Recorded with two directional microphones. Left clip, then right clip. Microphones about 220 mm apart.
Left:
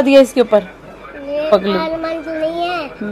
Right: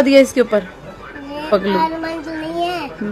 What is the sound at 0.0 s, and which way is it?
A woman's voice, centre (ahead or behind).